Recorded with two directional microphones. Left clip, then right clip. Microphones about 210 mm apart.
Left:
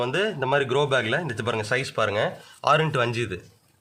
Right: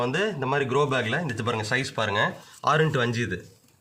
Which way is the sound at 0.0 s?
25° left (ahead or behind).